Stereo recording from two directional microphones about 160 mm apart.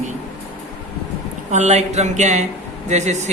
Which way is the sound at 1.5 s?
45° right (ahead or behind).